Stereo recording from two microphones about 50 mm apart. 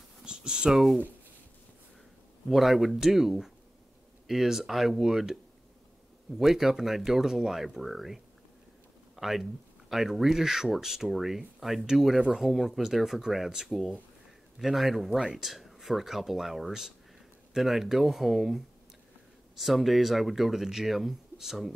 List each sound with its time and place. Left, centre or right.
0.2 s a sound: centre
0.7 s speech: centre
2.5 s speech: centre
6.4 s speech: centre
12.4 s speech: centre
15.0 s speech: centre
15.3 s speech: centre